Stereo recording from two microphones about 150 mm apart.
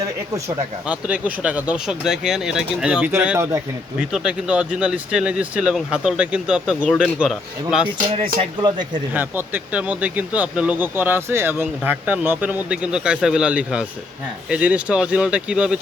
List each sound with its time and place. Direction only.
0.9 s speech: 10° right (ahead or behind)
3.9 s speech: 5° right (ahead or behind)
8.4 s speech: 30° right (ahead or behind)
9.1 s speech: 10° right (ahead or behind)